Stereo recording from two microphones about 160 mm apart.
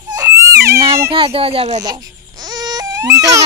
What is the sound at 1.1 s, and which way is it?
Speech, 35° right (ahead or behind).